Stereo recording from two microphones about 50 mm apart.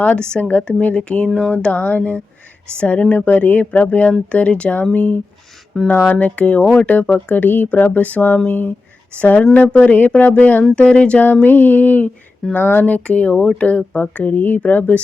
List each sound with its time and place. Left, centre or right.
0.2 s speech: left
9.1 s speech: left
11.4 s speech: left
12.4 s speech: centre
12.8 s speech: left